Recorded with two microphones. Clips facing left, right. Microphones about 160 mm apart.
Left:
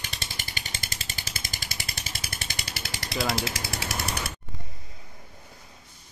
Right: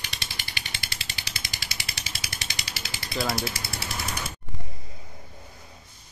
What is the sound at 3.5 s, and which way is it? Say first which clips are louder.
Jackhammer: left 2 dB; 85° left.